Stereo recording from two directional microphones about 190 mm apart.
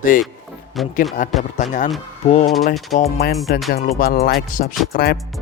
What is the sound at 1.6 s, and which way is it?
Music, 40° left (ahead or behind).